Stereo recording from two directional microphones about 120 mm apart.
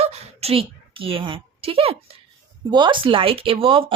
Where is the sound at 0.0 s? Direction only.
55° right (ahead or behind).